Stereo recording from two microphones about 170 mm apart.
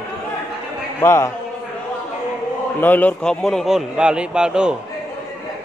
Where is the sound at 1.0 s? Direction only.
15° left (ahead or behind).